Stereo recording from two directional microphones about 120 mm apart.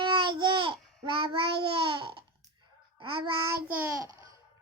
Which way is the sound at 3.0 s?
45° right (ahead or behind).